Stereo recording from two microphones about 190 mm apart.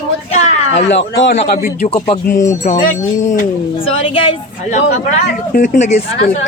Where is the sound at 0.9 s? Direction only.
70° left (ahead or behind).